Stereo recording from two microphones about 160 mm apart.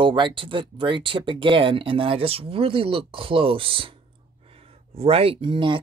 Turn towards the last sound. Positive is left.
turn(degrees=-30)  # may be behind; listen again after turning